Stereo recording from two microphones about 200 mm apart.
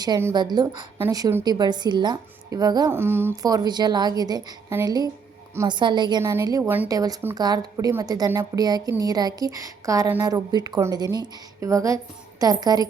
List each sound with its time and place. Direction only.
0.0 s a woman's voice: 15° right (ahead or behind)